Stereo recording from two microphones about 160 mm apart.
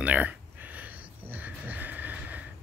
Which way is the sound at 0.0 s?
10° right (ahead or behind).